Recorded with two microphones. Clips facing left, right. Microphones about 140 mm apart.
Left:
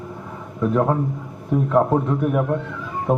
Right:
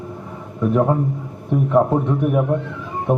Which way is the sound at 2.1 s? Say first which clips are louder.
Right 2 dB; 15° right (ahead or behind).